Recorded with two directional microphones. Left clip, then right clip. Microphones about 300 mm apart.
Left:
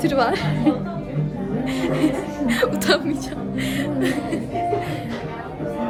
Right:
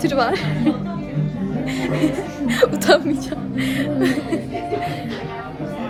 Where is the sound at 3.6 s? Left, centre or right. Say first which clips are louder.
Right 3 dB; centre.